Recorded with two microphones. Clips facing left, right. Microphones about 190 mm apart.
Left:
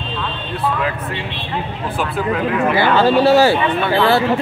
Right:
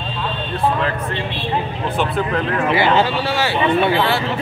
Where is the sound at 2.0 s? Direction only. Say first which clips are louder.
Even; 5° left (ahead or behind).